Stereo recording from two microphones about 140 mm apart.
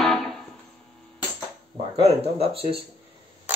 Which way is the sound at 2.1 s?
45° right (ahead or behind).